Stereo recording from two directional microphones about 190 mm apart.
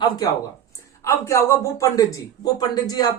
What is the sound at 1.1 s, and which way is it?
Speech, 15° left (ahead or behind).